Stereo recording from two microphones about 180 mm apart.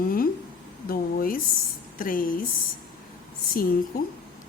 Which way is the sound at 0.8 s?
55° left (ahead or behind).